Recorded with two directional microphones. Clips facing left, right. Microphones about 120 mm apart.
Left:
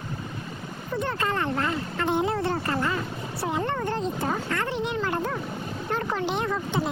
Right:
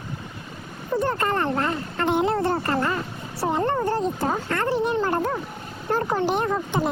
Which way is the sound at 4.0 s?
45° right (ahead or behind).